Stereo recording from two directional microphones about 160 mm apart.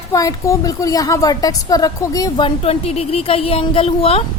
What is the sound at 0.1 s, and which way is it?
A woman's voice, 20° left (ahead or behind).